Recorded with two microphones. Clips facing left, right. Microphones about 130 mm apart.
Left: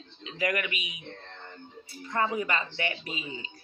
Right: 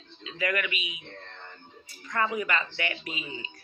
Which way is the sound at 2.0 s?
30° left (ahead or behind).